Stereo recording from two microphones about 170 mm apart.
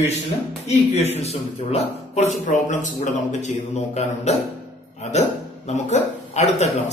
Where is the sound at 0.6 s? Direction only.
40° left (ahead or behind).